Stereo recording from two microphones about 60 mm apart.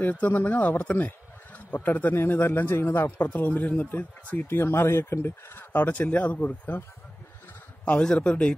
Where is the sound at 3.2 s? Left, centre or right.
Left.